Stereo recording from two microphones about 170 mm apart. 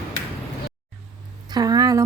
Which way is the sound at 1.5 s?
25° right (ahead or behind).